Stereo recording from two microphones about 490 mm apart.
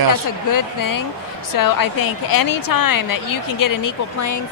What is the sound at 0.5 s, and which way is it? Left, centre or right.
A woman's voice, left.